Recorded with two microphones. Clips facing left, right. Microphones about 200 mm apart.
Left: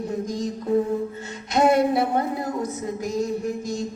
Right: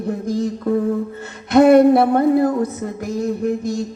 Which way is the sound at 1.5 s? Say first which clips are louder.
Right 9 dB; 60° right (ahead or behind).